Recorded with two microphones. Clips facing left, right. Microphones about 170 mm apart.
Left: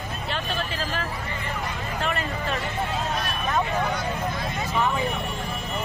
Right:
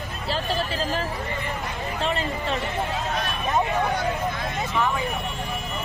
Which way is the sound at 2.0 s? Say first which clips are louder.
Right 2 dB; 30° right (ahead or behind).